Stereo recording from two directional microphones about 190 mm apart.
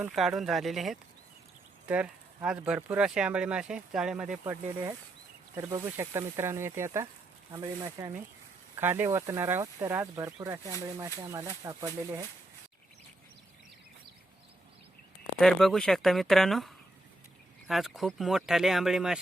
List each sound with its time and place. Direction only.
0.1 s speech: centre (ahead or behind)
4.4 s speech: 15° right (ahead or behind)
15.4 s speech: centre (ahead or behind)